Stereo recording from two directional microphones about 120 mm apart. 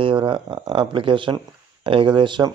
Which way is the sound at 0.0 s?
45° right (ahead or behind).